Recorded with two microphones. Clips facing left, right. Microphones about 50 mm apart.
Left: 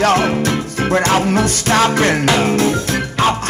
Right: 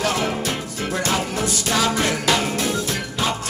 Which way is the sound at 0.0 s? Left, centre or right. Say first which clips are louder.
Left 8 dB; left.